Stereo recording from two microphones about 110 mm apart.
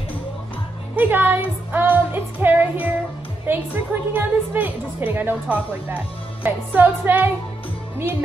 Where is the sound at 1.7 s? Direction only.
15° right (ahead or behind).